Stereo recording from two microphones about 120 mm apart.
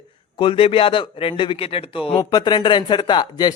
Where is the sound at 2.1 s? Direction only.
30° left (ahead or behind).